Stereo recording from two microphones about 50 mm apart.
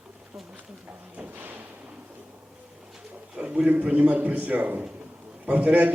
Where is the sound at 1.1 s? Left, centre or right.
Right.